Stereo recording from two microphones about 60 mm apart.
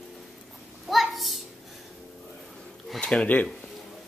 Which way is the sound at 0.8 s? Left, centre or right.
Centre.